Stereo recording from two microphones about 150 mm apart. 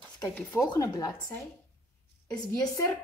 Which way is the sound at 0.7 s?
25° left (ahead or behind).